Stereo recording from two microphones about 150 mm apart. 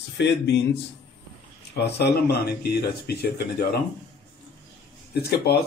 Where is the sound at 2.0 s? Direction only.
90° left.